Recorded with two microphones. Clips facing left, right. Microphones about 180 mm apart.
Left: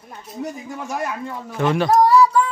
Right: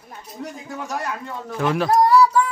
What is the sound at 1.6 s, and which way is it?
Speech, centre (ahead or behind).